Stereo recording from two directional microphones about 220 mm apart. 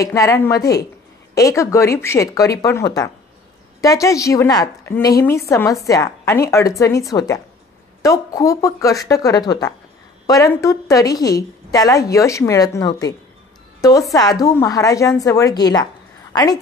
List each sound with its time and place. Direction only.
0.0 s a woman's voice: 15° left (ahead or behind)